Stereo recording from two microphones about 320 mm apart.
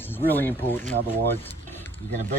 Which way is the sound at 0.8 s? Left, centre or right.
Right.